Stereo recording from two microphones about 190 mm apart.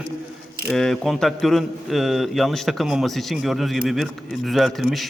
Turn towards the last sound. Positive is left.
turn(degrees=0)  # may be behind; listen again after turning